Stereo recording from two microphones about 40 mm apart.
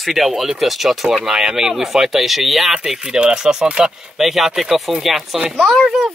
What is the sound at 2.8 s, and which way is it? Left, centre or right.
Speech, centre.